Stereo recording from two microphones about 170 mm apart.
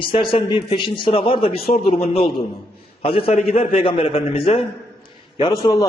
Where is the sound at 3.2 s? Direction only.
35° left (ahead or behind).